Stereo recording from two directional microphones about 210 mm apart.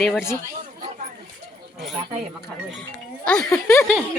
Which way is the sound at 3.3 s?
5° left (ahead or behind).